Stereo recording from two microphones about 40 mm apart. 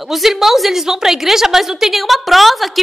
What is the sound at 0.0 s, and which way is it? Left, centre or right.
A woman's voice, centre.